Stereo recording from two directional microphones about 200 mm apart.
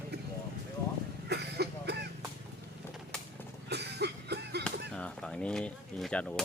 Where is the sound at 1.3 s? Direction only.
55° right (ahead or behind).